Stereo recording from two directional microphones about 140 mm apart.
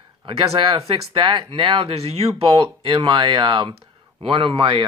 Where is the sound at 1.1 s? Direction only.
35° right (ahead or behind).